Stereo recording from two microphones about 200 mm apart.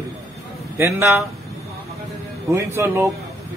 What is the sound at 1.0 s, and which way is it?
Speech, centre (ahead or behind).